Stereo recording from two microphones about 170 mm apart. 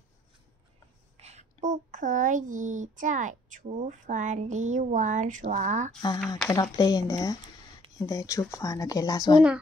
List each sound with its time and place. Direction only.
1.2 s a child's voice: 40° right (ahead or behind)
5.9 s speech: 25° left (ahead or behind)
6.2 s speech: centre (ahead or behind)
6.5 s speech: 20° left (ahead or behind)